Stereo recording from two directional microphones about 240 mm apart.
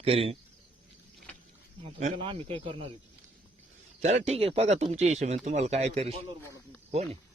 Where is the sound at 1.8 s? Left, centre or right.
Right.